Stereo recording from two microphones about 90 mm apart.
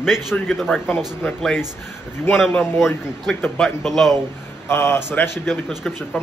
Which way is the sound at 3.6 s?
Centre (ahead or behind).